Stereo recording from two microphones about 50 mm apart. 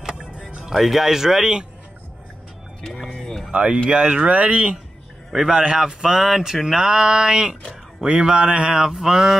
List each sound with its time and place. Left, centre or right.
0.0 s music: centre
0.7 s speech: centre
2.8 s speech: centre
3.1 s a sound: centre
3.5 s speech: right
5.3 s speech: centre